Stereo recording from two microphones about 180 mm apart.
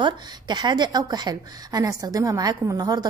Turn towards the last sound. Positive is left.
turn(degrees=-20)  # may be behind; listen again after turning